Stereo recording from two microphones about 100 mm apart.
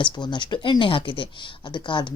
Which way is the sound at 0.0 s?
50° left (ahead or behind).